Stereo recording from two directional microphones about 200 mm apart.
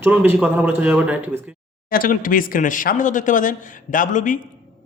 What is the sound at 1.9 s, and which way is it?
Speech, 45° left (ahead or behind).